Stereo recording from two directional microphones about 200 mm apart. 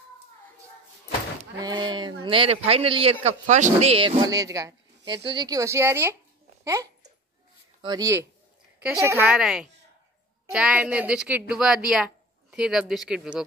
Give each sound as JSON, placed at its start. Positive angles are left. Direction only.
{"t": 1.6, "sound": "a man's voice", "side_deg": -20}
{"t": 9.2, "sound": "speech", "side_deg": 0}